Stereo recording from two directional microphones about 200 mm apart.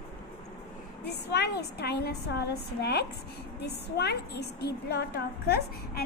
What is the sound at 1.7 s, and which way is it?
A woman's voice, 55° left (ahead or behind).